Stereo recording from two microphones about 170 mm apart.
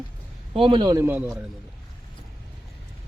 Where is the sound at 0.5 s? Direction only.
30° right (ahead or behind); by 1.3 s 10° right (ahead or behind).